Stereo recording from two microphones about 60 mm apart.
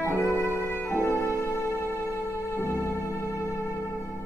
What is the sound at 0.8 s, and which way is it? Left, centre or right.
Music, left.